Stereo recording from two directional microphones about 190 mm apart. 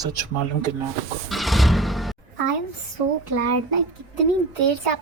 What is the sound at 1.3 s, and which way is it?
Vehicle, centre (ahead or behind).